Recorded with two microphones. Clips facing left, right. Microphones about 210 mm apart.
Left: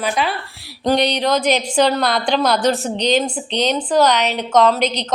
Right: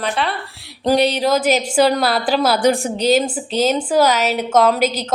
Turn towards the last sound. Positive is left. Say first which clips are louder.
# even
turn(degrees=-5)  # may be behind; listen again after turning